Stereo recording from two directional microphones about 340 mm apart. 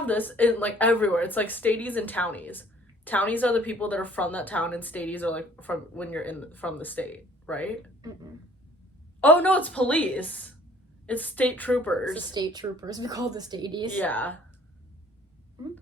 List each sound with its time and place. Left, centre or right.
0.0 s a woman's voice: centre
9.2 s a woman's voice: centre
12.3 s a woman's voice: centre
13.9 s a woman's voice: centre